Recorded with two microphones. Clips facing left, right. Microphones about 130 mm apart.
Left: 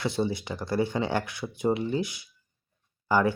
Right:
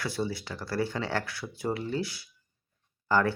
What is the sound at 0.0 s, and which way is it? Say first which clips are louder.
Speech: left 4 dB; 20° left (ahead or behind).